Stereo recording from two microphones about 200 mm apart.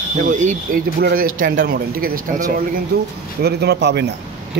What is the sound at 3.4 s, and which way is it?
Speech, 55° right (ahead or behind).